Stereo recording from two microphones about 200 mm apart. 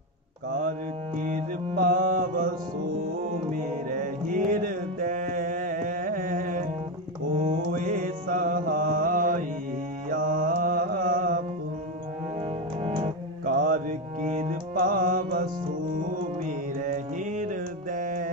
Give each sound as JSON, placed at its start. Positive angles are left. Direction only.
{"t": 0.5, "sound": "mantra", "side_deg": -40}
{"t": 3.5, "sound": "music", "side_deg": -40}
{"t": 4.5, "sound": "mantra", "side_deg": -40}
{"t": 7.3, "sound": "music", "side_deg": -40}
{"t": 12.8, "sound": "music", "side_deg": -30}
{"t": 13.5, "sound": "music", "side_deg": -45}